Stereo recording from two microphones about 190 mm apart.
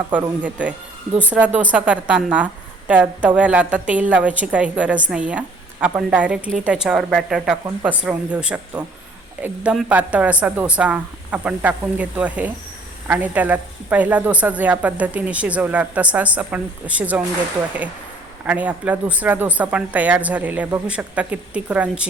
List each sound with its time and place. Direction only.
1.3 s a woman's voice: 5° right (ahead or behind)
7.6 s a woman's voice: 15° right (ahead or behind)
8.0 s a woman's voice: 5° right (ahead or behind)
18.4 s a woman's voice: 10° right (ahead or behind)